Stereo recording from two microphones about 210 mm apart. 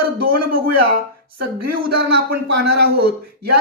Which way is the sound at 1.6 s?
50° right (ahead or behind).